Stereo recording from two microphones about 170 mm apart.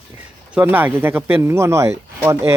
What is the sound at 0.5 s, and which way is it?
Speech, 10° right (ahead or behind).